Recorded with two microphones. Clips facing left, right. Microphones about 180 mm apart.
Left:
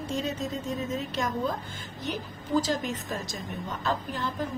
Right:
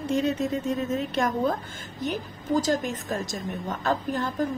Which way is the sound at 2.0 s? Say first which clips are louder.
Right 5 dB; 45° right (ahead or behind).